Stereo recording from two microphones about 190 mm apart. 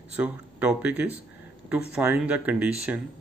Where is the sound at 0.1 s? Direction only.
10° right (ahead or behind).